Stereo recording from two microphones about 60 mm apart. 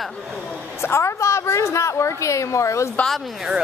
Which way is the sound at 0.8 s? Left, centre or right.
Left.